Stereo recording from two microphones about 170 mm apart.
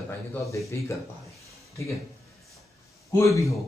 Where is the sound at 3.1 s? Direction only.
15° left (ahead or behind).